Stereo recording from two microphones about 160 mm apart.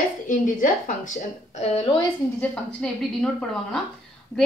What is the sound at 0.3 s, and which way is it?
Speech, 55° left (ahead or behind).